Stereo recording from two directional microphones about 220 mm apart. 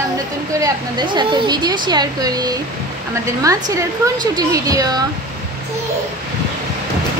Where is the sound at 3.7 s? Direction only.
15° right (ahead or behind).